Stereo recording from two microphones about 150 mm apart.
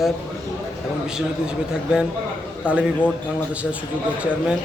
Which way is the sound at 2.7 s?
10° right (ahead or behind).